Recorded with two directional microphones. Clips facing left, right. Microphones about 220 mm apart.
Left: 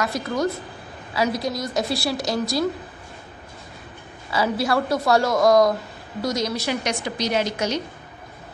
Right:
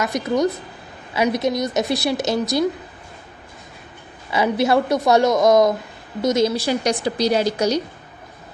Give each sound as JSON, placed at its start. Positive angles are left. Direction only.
{"t": 0.0, "sound": "a woman's voice", "side_deg": -20}
{"t": 4.3, "sound": "a woman's voice", "side_deg": -20}